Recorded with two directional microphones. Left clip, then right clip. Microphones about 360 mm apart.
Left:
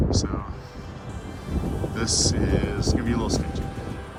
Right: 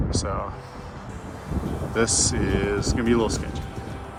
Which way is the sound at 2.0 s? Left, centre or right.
Centre.